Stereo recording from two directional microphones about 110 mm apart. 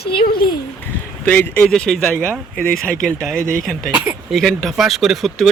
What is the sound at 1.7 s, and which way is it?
Speech, 5° left (ahead or behind).